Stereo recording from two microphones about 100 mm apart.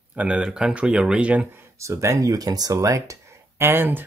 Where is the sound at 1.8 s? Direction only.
30° right (ahead or behind).